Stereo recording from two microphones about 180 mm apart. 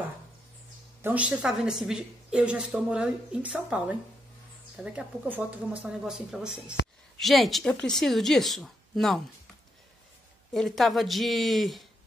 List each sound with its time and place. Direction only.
1.0 s a woman's voice: 5° right (ahead or behind)
10.5 s a woman's voice: centre (ahead or behind)